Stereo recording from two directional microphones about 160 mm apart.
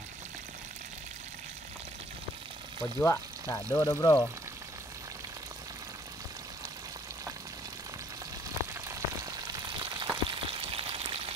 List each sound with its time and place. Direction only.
2.8 s speech: 20° left (ahead or behind)
8.8 s frying: 25° right (ahead or behind)